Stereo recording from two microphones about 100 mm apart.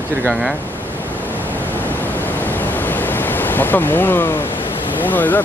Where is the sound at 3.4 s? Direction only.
20° left (ahead or behind).